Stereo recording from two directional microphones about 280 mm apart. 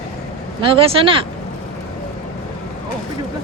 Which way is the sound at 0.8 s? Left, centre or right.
Centre.